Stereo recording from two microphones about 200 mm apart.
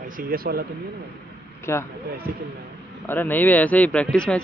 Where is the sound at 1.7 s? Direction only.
15° left (ahead or behind).